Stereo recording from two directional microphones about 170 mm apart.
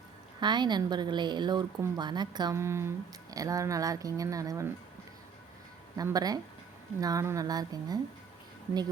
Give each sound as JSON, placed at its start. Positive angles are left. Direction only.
{"t": 0.3, "sound": "speech", "side_deg": -25}
{"t": 6.0, "sound": "speech", "side_deg": -20}